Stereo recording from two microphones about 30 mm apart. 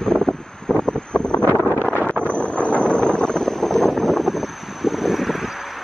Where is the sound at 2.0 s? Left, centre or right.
Left.